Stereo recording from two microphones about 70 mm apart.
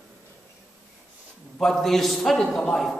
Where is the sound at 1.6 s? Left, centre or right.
Centre.